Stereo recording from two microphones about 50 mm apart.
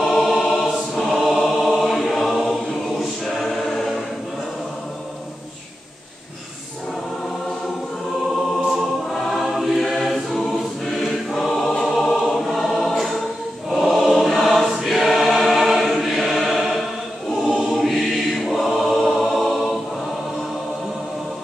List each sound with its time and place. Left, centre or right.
0.0 s choir: centre
1.3 s music: centre
2.2 s choir: centre
9.1 s choir: centre